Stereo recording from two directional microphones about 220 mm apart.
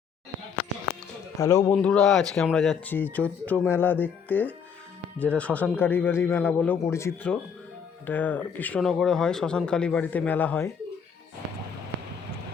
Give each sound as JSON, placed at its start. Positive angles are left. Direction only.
{"t": 1.4, "sound": "speech", "side_deg": 15}